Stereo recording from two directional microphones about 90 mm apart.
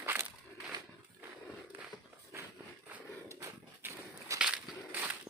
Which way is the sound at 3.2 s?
35° right (ahead or behind).